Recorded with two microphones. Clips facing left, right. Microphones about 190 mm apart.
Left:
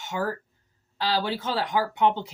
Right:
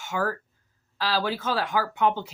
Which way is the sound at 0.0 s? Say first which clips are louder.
Right 1 dB; 25° left (ahead or behind).